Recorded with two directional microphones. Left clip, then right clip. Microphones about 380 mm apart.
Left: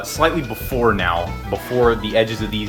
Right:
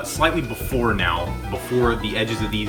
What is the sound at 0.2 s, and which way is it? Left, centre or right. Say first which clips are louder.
Speech: left 3 dB; centre.